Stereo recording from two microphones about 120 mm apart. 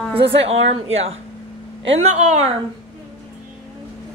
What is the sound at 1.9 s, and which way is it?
Speech, 75° right (ahead or behind).